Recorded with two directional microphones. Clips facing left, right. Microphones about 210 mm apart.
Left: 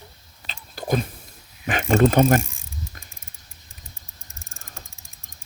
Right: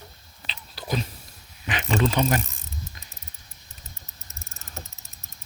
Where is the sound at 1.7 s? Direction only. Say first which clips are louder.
Left 6 dB; 45° left (ahead or behind).